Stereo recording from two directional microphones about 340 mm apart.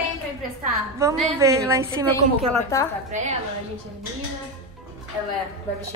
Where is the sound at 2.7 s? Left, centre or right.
Centre.